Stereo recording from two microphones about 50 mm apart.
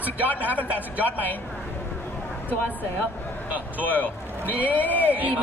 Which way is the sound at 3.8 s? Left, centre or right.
Left.